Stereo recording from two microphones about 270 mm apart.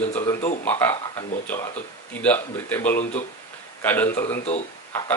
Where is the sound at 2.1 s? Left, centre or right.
Centre.